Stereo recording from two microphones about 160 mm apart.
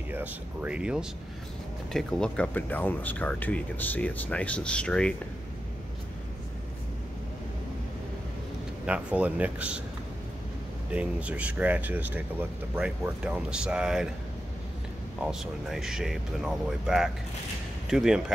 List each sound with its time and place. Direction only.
0.1 s speech: 10° right (ahead or behind); by 5.1 s 5° left (ahead or behind)
8.8 s speech: 10° right (ahead or behind)
10.9 s speech: 10° right (ahead or behind)
15.2 s speech: 5° right (ahead or behind)